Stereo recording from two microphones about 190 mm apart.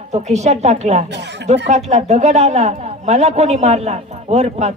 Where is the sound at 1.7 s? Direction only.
35° right (ahead or behind).